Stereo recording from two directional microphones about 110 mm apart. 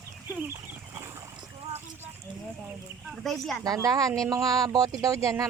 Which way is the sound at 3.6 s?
35° right (ahead or behind).